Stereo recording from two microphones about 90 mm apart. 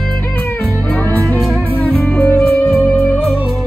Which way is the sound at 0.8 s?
20° left (ahead or behind).